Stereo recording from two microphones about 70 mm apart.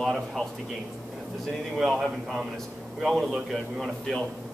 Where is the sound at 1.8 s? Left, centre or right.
Centre.